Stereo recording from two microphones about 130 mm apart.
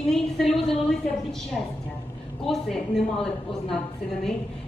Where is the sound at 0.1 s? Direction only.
5° left (ahead or behind).